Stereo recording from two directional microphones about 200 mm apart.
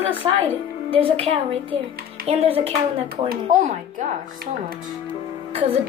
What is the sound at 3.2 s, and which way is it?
Speech, 50° right (ahead or behind).